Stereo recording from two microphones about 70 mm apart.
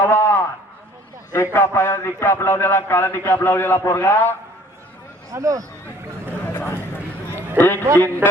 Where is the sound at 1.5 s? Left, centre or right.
Left.